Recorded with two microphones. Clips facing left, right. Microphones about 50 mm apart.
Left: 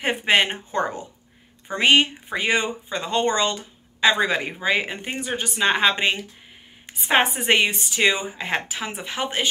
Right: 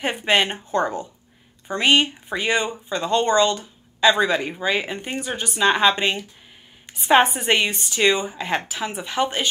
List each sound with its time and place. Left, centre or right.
0.0 s speech: left
7.3 s speech: left